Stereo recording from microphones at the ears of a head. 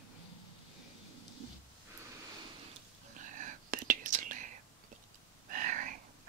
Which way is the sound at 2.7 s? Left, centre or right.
Right.